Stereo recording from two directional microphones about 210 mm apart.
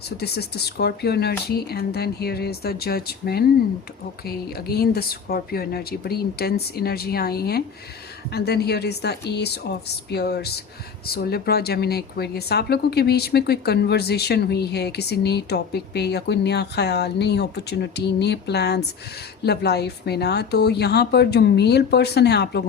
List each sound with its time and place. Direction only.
0.2 s speech: 50° left (ahead or behind)